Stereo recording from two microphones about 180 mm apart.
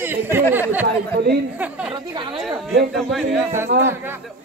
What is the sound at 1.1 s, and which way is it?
Speech, 65° right (ahead or behind).